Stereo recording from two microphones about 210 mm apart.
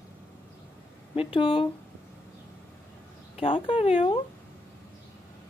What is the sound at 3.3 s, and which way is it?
Speech, 25° left (ahead or behind).